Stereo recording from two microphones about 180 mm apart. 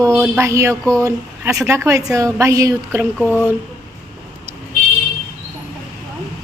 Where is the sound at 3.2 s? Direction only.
10° left (ahead or behind).